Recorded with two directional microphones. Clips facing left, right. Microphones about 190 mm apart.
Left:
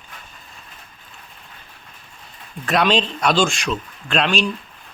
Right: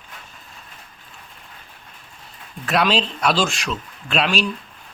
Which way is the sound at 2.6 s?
5° right (ahead or behind).